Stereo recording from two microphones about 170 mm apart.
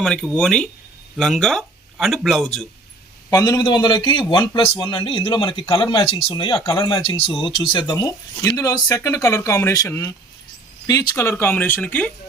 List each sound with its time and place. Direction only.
0.0 s speech: 5° left (ahead or behind)
3.2 s speech: 20° left (ahead or behind)